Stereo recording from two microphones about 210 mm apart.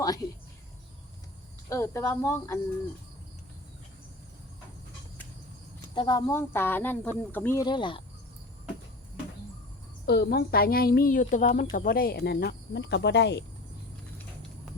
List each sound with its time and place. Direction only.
0.0 s a sound: 20° left (ahead or behind)
1.7 s speech: 15° left (ahead or behind)
5.9 s speech: 20° left (ahead or behind)
10.1 s speech: 50° left (ahead or behind)